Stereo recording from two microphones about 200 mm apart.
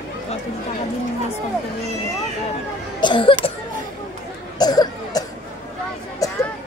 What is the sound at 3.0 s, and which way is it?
Speech, 25° left (ahead or behind).